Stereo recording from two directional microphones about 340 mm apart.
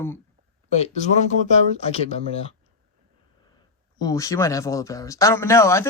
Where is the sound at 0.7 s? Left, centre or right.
Centre.